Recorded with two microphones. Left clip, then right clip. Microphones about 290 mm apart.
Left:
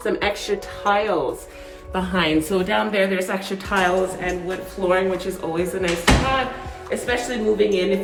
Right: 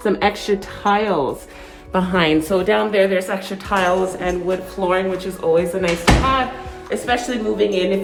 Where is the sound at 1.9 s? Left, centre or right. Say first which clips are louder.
Right 4 dB; right.